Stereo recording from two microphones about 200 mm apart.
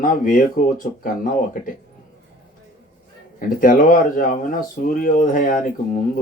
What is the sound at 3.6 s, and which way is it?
Speech, 40° left (ahead or behind).